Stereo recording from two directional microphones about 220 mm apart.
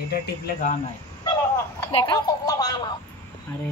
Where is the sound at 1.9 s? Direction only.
20° left (ahead or behind).